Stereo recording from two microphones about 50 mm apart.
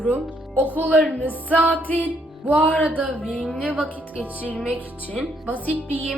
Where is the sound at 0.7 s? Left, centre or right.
Right.